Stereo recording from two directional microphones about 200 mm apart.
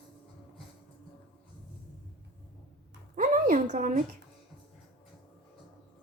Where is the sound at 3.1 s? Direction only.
45° right (ahead or behind).